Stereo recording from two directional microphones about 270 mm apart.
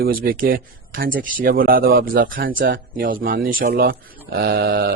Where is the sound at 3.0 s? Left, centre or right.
Right.